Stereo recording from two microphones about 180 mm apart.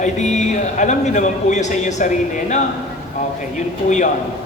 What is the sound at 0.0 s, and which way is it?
A man's voice, 40° left (ahead or behind).